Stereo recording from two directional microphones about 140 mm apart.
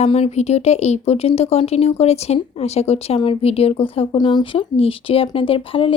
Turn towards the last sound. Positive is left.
turn(degrees=40)  # may be behind; listen again after turning